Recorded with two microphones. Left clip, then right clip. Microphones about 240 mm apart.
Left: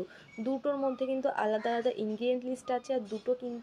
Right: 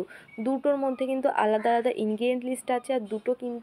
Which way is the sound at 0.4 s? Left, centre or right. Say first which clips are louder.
Right 6 dB; right.